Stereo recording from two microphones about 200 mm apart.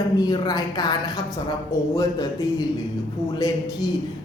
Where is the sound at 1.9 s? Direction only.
20° left (ahead or behind).